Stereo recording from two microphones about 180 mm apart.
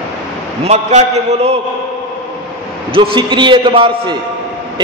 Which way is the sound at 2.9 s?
25° right (ahead or behind).